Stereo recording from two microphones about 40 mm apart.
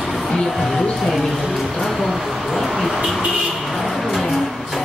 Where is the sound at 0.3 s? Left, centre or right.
Centre.